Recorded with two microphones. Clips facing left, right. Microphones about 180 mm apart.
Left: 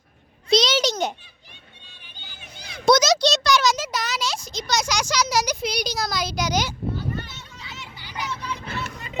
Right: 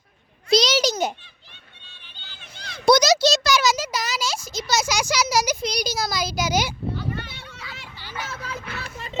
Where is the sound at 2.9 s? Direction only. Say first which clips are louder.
Right 1 dB; centre (ahead or behind).